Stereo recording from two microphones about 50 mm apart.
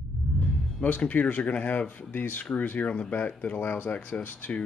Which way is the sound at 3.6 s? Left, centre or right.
Left.